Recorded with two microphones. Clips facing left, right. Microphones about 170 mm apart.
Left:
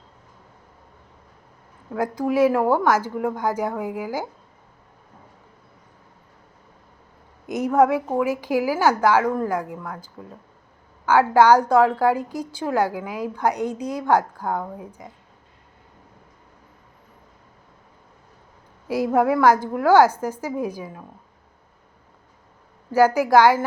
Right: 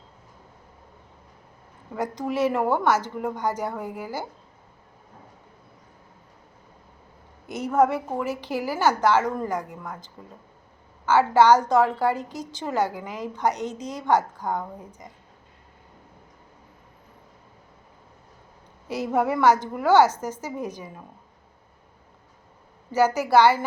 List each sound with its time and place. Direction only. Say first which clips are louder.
1.9 s a woman's voice: left 5 dB; 5° left (ahead or behind)
7.4 s a sound: left 6 dB; 15° left (ahead or behind)
7.9 s a woman's voice: left 5 dB; 10° left (ahead or behind)
18.9 s a woman's voice: left 5 dB; 10° left (ahead or behind)
23.0 s a woman's voice: left 2 dB; 10° left (ahead or behind)